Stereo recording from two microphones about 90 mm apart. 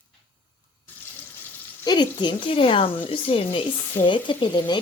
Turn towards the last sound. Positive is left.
turn(degrees=60)  # may be behind; listen again after turning